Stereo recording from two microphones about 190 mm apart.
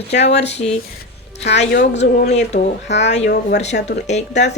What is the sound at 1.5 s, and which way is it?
Speech, 65° left (ahead or behind).